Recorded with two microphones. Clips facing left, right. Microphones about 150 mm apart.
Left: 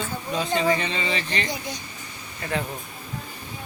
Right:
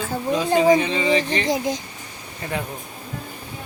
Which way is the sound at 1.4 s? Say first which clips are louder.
Right 9 dB; 90° right.